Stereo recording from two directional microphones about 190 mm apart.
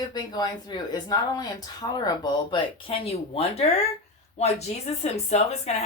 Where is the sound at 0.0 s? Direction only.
20° left (ahead or behind).